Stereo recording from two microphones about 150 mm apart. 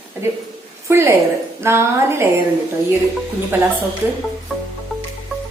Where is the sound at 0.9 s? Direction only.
15° right (ahead or behind).